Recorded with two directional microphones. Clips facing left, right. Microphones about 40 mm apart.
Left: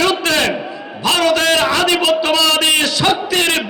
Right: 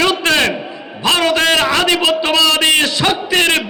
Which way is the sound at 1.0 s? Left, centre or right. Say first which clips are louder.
Right 1 dB; right.